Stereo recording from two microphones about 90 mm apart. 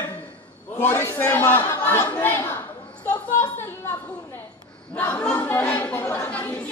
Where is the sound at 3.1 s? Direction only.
25° left (ahead or behind).